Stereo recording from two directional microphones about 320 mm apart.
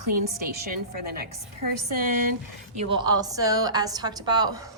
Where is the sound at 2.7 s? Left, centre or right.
Centre.